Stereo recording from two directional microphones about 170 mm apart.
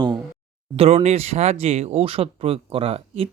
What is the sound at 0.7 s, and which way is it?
Speech, 35° right (ahead or behind).